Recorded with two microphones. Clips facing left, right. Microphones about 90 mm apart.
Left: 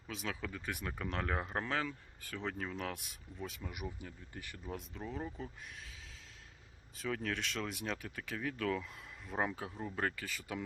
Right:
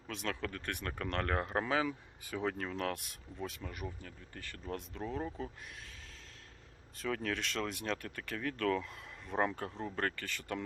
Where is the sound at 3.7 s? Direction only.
15° left (ahead or behind).